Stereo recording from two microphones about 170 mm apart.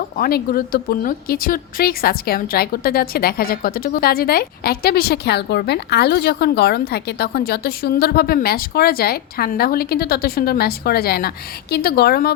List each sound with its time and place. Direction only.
0.2 s speech: 60° left (ahead or behind)